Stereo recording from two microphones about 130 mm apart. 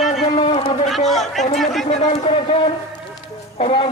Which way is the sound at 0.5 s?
55° left (ahead or behind).